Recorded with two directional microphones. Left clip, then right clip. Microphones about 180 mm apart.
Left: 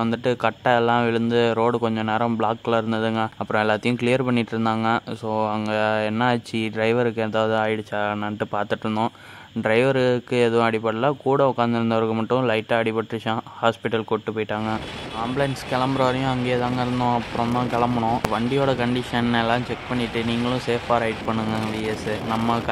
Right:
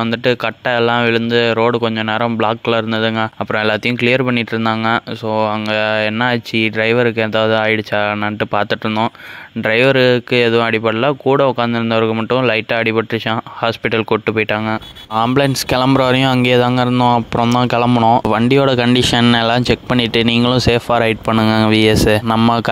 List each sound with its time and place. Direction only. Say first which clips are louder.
0.0 s speech: right 6 dB; 15° right (ahead or behind)
15.1 s speech: right 11 dB; 50° right (ahead or behind)